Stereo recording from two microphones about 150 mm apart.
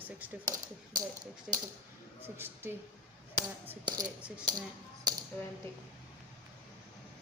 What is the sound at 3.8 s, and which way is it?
Speech, 25° right (ahead or behind).